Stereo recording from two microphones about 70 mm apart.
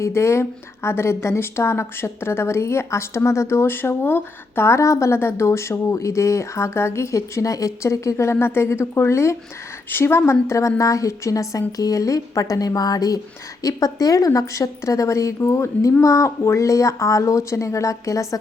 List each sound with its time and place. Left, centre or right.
0.0 s a woman's voice: left